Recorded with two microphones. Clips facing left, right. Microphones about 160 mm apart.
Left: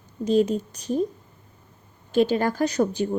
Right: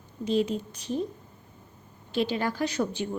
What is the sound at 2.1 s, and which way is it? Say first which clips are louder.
A woman's voice: left 7 dB; 45° left (ahead or behind).